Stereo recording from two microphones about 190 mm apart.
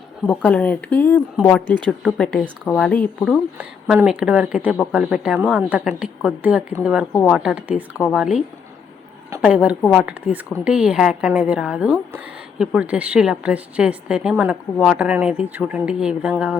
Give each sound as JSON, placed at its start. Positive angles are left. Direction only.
{"t": 0.3, "sound": "speech", "side_deg": 5}
{"t": 1.6, "sound": "speech", "side_deg": -25}
{"t": 1.9, "sound": "a woman's voice", "side_deg": 5}
{"t": 3.3, "sound": "a woman's voice", "side_deg": -5}